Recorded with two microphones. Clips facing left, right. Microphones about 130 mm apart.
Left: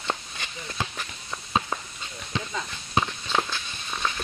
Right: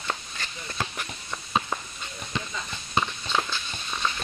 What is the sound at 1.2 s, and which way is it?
Walk, centre (ahead or behind).